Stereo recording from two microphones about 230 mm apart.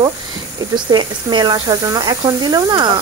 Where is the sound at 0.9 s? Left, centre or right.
Centre.